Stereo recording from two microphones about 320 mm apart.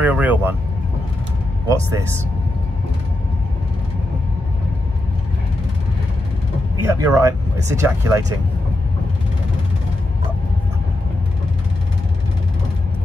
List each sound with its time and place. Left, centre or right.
0.0 s speech: centre
6.8 s speech: centre